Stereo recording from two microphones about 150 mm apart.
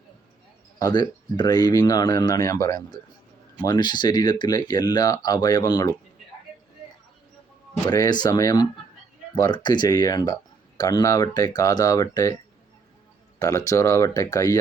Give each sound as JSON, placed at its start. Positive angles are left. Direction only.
{"t": 0.8, "sound": "speech", "side_deg": 25}
{"t": 7.9, "sound": "speech", "side_deg": 25}
{"t": 13.4, "sound": "speech", "side_deg": 20}